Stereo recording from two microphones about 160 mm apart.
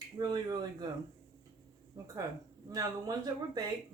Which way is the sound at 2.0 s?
20° right (ahead or behind).